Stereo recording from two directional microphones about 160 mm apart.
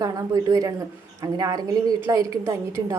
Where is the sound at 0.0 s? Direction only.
25° right (ahead or behind).